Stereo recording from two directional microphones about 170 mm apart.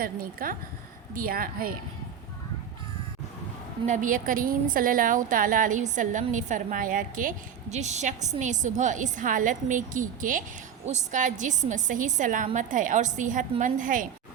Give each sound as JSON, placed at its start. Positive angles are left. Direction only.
{"t": 0.0, "sound": "a woman's voice", "side_deg": -55}
{"t": 3.8, "sound": "a woman's voice", "side_deg": -50}